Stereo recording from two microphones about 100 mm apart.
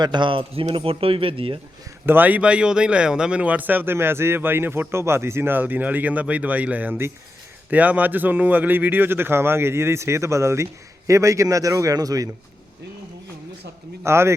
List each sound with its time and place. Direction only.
0.0 s speech: 50° right (ahead or behind)
2.0 s a man's voice: 20° right (ahead or behind); by 12.3 s 35° right (ahead or behind)
14.0 s a man's voice: 25° right (ahead or behind)